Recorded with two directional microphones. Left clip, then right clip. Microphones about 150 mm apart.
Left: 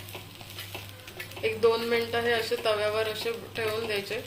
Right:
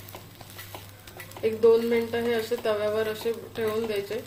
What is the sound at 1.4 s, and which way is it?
Speech, 45° right (ahead or behind).